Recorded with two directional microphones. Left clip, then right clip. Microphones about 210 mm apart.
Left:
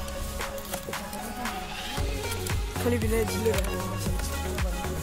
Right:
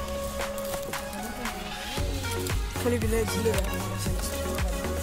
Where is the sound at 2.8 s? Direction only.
10° right (ahead or behind).